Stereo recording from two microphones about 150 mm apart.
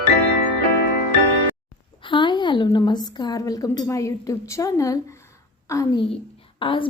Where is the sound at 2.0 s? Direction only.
30° left (ahead or behind).